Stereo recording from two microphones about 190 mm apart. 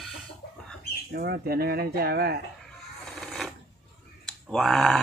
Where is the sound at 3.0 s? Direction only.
5° left (ahead or behind).